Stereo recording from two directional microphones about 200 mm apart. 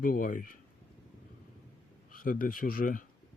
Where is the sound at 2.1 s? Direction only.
45° left (ahead or behind).